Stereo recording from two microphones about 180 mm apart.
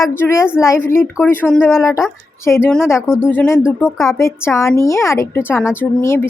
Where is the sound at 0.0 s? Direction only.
15° left (ahead or behind).